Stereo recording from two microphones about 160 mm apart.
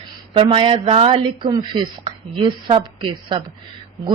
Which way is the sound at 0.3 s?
35° right (ahead or behind).